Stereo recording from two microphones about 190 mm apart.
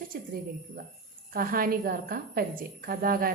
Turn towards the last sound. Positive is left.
turn(degrees=-50)  # may be behind; listen again after turning